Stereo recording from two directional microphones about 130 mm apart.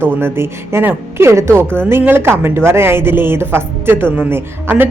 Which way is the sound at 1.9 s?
15° right (ahead or behind).